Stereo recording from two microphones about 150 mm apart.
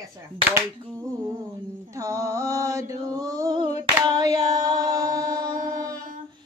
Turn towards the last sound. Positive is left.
turn(degrees=-25)  # may be behind; listen again after turning